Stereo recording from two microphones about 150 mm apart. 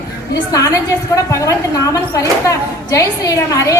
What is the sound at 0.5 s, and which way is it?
A woman's voice, 20° left (ahead or behind).